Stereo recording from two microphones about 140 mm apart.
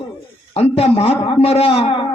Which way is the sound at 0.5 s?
45° left (ahead or behind).